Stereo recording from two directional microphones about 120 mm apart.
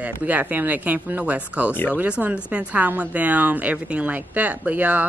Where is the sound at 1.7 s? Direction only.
15° left (ahead or behind).